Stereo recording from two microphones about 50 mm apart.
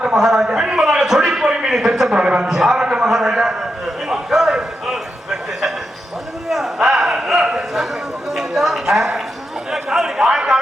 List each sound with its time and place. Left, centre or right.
0.0 s a man's voice: centre
2.1 s speech: right
2.8 s a sound: centre
9.7 s chatter: centre